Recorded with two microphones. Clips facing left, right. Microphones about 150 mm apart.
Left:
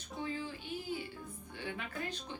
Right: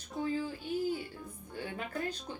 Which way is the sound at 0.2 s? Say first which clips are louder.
Right 6 dB; 40° right (ahead or behind).